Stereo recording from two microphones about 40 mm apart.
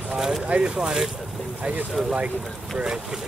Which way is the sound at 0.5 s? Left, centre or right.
Right.